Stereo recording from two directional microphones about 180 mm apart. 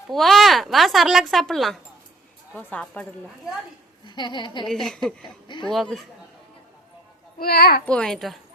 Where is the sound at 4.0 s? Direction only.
25° left (ahead or behind).